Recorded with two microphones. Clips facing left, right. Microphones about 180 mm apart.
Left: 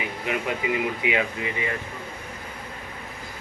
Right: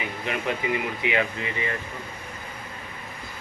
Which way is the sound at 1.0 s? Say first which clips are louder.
Even; 15° left (ahead or behind).